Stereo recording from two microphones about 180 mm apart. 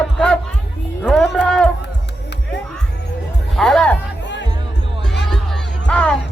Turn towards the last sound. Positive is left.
turn(degrees=5)  # may be behind; listen again after turning